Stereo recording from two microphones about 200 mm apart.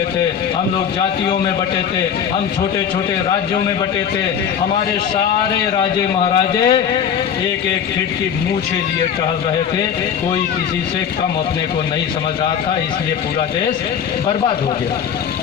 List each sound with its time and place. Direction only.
6.6 s a man's voice: 25° left (ahead or behind)